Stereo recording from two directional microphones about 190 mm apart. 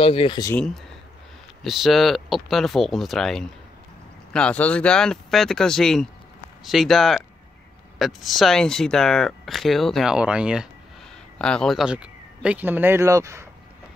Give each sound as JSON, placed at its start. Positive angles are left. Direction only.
{"t": 0.0, "sound": "speech", "side_deg": 30}
{"t": 1.6, "sound": "speech", "side_deg": 0}